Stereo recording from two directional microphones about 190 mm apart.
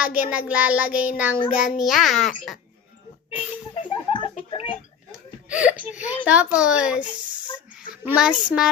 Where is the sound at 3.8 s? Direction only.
25° left (ahead or behind).